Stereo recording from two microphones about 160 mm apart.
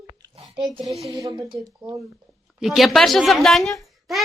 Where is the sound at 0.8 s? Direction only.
Centre (ahead or behind).